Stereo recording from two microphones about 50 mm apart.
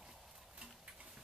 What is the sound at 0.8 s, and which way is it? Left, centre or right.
Tick-tock, centre.